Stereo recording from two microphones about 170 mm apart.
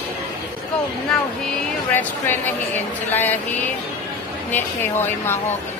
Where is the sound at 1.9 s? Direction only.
10° left (ahead or behind).